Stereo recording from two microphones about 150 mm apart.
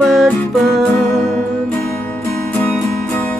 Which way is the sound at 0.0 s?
Centre (ahead or behind).